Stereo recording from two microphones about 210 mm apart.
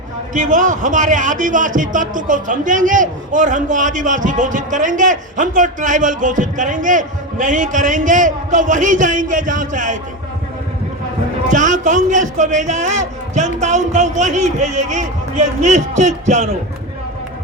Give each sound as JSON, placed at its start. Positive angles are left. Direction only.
{"t": 0.3, "sound": "a man's voice", "side_deg": -35}
{"t": 11.5, "sound": "a man's voice", "side_deg": -35}